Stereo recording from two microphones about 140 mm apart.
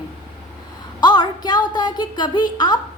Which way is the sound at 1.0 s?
30° left (ahead or behind).